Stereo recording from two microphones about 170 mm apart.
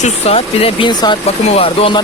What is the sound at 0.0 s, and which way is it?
Speech, 35° left (ahead or behind).